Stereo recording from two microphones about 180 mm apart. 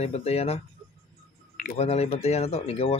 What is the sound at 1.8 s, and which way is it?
Speech, 35° left (ahead or behind).